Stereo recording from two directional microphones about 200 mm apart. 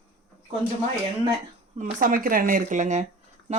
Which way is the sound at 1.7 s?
45° right (ahead or behind).